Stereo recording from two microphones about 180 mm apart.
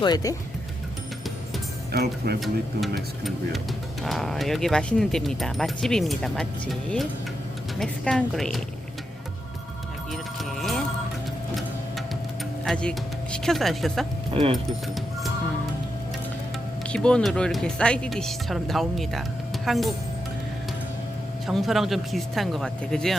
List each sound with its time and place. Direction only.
0.0 s speech: 20° left (ahead or behind)
1.9 s speech: 60° right (ahead or behind)
4.0 s speech: centre (ahead or behind)
10.1 s music: centre (ahead or behind)
12.6 s speech: 5° left (ahead or behind)
16.9 s speech: 5° left (ahead or behind)
21.4 s speech: centre (ahead or behind)